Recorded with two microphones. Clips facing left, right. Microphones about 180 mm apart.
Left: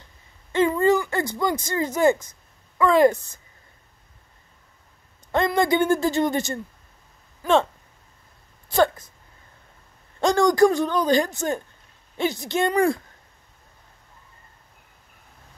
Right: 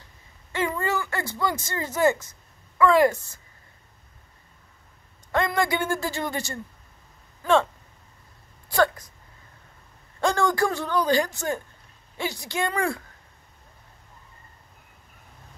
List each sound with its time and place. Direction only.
0.5 s speech: 20° left (ahead or behind)
5.3 s speech: 20° left (ahead or behind)
8.6 s a sound: 25° left (ahead or behind)
10.2 s speech: 15° left (ahead or behind)